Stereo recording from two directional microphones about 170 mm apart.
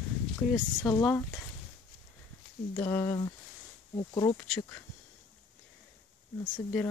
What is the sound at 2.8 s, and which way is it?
Speech, 20° left (ahead or behind).